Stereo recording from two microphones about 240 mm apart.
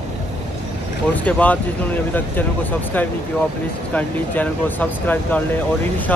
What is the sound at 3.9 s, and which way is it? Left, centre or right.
Speech, centre.